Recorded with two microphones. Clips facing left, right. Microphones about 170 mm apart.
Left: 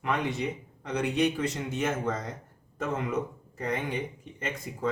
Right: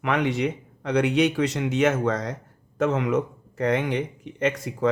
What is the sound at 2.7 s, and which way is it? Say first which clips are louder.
Speech: right 8 dB; 90° right.